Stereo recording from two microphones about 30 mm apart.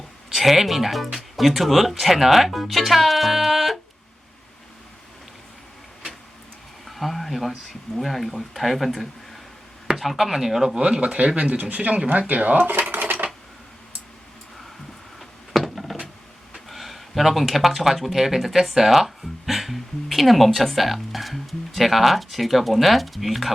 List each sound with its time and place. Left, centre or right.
0.3 s speech: centre
6.8 s speech: centre
10.8 s speech: right
12.9 s a sound: right
15.2 s a sound: centre
16.6 s speech: centre